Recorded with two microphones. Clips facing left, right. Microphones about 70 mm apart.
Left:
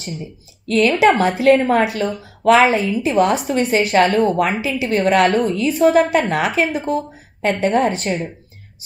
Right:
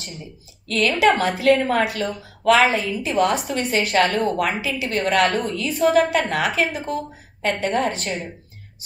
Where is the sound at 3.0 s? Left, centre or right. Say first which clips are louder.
Left 3 dB; left.